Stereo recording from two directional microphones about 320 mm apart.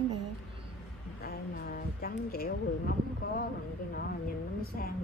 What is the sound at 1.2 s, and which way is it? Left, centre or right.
Speech, left.